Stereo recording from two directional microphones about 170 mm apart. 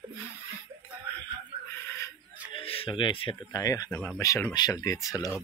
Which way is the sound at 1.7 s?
15° left (ahead or behind).